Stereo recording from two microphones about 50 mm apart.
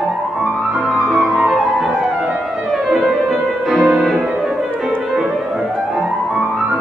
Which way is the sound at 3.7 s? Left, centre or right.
Centre.